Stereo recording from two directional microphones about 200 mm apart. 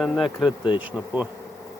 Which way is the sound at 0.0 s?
Centre (ahead or behind).